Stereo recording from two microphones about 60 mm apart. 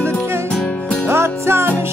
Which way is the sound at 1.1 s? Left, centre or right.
Right.